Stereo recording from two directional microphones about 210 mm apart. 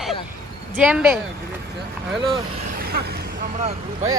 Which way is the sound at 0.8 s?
5° right (ahead or behind).